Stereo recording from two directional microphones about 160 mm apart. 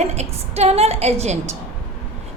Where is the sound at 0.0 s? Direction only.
45° right (ahead or behind).